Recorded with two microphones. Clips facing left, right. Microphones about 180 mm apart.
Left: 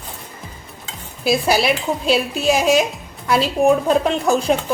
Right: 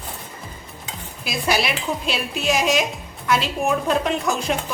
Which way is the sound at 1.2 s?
30° left (ahead or behind).